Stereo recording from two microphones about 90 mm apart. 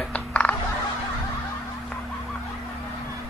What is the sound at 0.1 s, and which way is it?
Music, 15° left (ahead or behind).